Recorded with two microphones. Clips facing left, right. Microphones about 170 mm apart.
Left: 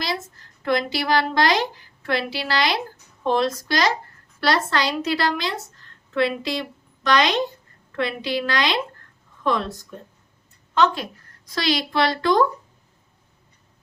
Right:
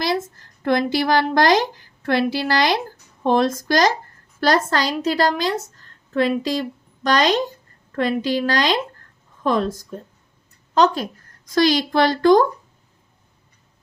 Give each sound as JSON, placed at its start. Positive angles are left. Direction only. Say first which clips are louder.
{"t": 0.6, "sound": "a woman's voice", "louder": "right 4 dB", "side_deg": -50}